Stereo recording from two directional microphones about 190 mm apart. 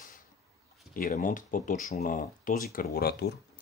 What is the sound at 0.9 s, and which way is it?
Speech, 45° left (ahead or behind).